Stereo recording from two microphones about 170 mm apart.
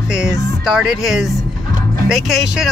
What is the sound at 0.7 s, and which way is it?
Speech, 5° right (ahead or behind).